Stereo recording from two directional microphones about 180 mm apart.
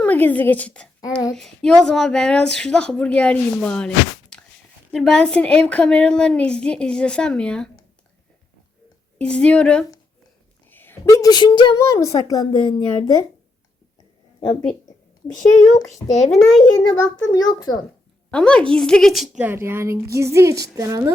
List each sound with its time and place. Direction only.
0.0 s a woman's voice: 10° left (ahead or behind)
9.1 s a woman's voice: 5° left (ahead or behind); by 13.1 s 30° left (ahead or behind)
14.4 s a woman's voice: 40° left (ahead or behind)
16.7 s a child's voice: 15° left (ahead or behind)
18.3 s a woman's voice: 5° left (ahead or behind); by 21.1 s 20° right (ahead or behind)